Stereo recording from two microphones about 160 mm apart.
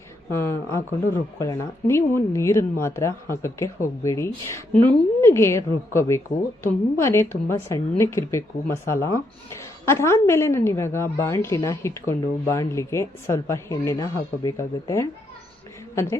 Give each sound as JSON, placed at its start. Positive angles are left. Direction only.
{"t": 0.3, "sound": "a woman's voice", "side_deg": 15}